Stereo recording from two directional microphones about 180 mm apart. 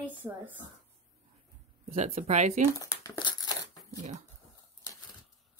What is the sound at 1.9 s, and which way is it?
Speech, 35° right (ahead or behind).